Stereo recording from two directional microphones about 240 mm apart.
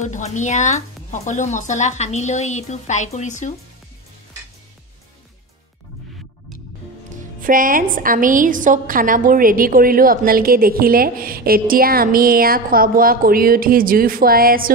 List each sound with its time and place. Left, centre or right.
0.0 s speech: left
7.3 s a woman's voice: right